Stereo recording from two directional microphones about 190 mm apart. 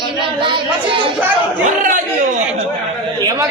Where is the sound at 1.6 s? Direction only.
45° right (ahead or behind).